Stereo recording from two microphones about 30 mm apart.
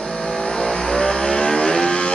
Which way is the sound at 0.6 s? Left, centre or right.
Left.